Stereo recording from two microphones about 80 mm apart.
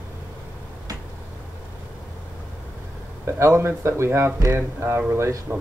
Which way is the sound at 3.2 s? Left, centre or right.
Right.